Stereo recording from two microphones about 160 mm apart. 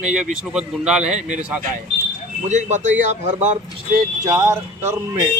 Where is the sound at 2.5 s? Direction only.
50° right (ahead or behind).